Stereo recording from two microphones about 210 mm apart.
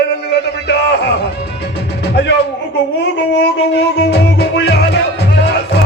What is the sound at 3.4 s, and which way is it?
Music, 55° left (ahead or behind).